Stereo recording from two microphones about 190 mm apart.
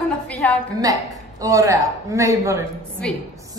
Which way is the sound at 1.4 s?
15° right (ahead or behind).